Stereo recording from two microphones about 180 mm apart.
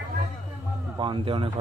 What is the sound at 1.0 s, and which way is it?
Speech, 30° right (ahead or behind).